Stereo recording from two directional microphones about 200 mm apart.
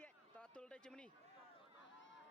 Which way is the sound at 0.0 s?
5° left (ahead or behind).